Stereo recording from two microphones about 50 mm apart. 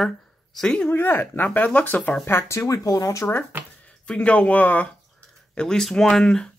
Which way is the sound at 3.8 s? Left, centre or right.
Left.